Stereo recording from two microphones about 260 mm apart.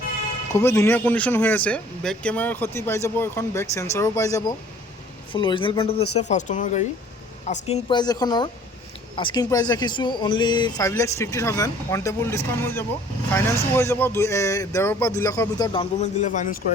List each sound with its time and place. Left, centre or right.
0.6 s speech: centre; by 16.6 s left